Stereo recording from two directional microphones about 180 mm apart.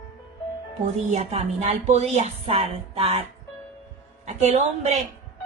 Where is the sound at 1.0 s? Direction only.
40° right (ahead or behind).